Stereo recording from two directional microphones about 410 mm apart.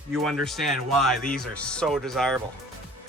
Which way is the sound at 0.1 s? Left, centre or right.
Centre.